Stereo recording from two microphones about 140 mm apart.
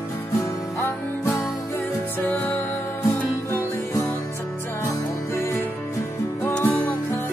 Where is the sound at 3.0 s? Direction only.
20° left (ahead or behind).